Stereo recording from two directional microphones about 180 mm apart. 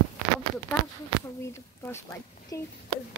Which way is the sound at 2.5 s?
20° left (ahead or behind).